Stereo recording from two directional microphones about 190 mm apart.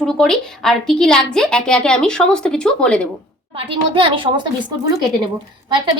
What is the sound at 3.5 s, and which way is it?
Speech, 25° right (ahead or behind).